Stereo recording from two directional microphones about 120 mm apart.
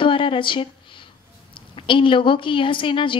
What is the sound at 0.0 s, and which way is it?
Speech, 45° left (ahead or behind).